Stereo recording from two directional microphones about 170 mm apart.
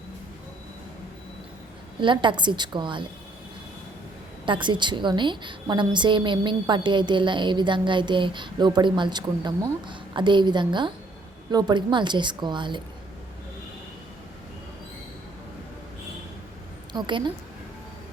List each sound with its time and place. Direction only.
2.0 s a woman's voice: 30° right (ahead or behind)
4.4 s a woman's voice: 30° right (ahead or behind)
16.9 s a woman's voice: 25° right (ahead or behind)